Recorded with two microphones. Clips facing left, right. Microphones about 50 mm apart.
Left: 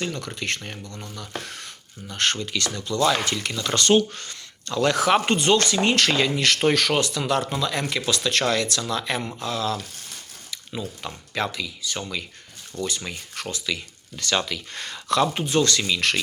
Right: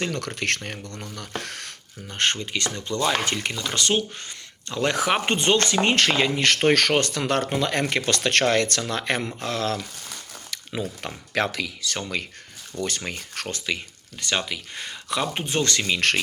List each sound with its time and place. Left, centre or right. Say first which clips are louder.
0.0 s speech: right 2 dB; right
2.0 s speech: even; right
3.7 s speech: left 6 dB; centre
4.2 s speech: left 1 dB; right
12.7 s speech: even; centre
13.1 s speech: right 1 dB; right
13.7 s speech: right 1 dB; right
14.4 s speech: left 1 dB; centre
15.3 s speech: left 3 dB; right